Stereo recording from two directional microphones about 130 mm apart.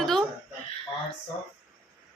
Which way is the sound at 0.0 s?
5° left (ahead or behind).